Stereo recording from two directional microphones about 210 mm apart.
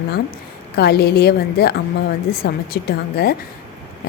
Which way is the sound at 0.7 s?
50° left (ahead or behind).